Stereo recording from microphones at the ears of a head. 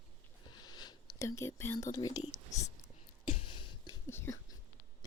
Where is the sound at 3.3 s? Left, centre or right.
Left.